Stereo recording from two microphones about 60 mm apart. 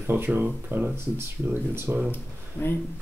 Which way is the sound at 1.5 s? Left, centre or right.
Right.